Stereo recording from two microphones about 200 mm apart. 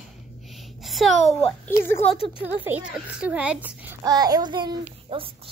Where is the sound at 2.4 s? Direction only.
10° right (ahead or behind).